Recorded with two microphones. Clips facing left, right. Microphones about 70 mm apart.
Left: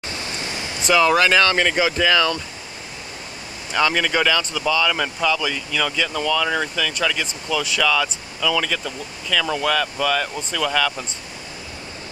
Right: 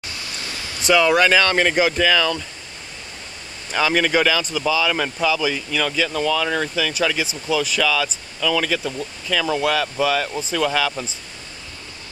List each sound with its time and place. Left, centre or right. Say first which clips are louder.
0.1 s a sound: left 3 dB; left
0.8 s speech: right 1 dB; centre
3.7 s speech: right 1 dB; centre